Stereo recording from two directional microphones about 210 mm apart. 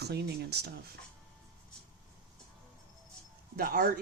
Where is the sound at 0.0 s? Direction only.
50° right (ahead or behind).